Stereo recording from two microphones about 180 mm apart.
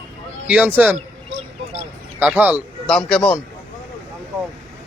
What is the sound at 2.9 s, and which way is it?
Speech, centre (ahead or behind).